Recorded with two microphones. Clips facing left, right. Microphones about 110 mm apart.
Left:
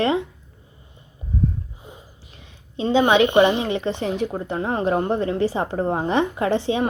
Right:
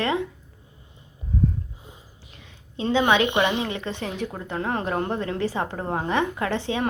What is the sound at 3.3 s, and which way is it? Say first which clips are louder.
Speech: left 6 dB; 45° left (ahead or behind).